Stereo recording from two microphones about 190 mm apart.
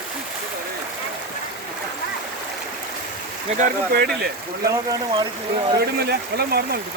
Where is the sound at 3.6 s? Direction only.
55° right (ahead or behind).